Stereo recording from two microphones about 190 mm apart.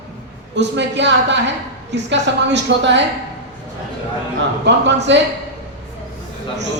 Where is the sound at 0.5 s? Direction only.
65° right (ahead or behind).